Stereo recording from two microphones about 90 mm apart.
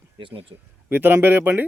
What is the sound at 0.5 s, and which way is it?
Speech, 45° right (ahead or behind).